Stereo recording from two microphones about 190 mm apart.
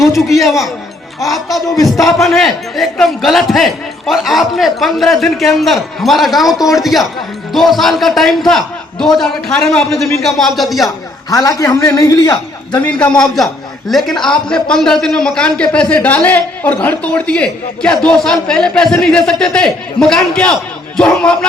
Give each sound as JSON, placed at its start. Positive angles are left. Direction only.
{"t": 0.0, "sound": "a man's voice", "side_deg": 0}
{"t": 10.8, "sound": "a man's voice", "side_deg": 20}
{"t": 12.8, "sound": "a man's voice", "side_deg": 5}